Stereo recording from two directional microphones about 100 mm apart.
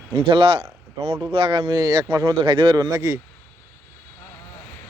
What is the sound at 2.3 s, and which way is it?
Speech, 55° right (ahead or behind).